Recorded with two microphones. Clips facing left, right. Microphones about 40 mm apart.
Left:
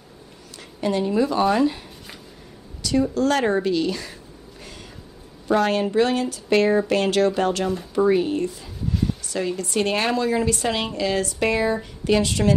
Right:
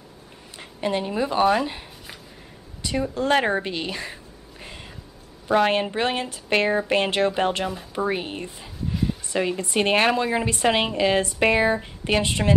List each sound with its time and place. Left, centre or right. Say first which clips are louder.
0.6 s a woman's voice: left 2 dB; right
2.8 s a woman's voice: left 4 dB; right
5.5 s a woman's voice: even; right
7.6 s speech: left 5 dB; centre
8.1 s a woman's voice: left 8 dB; right